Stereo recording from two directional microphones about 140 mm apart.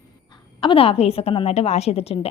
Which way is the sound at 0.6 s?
40° left (ahead or behind).